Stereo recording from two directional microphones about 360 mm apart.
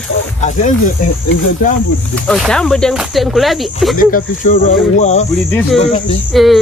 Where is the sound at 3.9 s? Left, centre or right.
Left.